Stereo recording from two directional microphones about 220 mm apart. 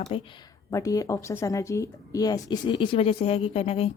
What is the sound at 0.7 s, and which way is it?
Speech, 15° left (ahead or behind).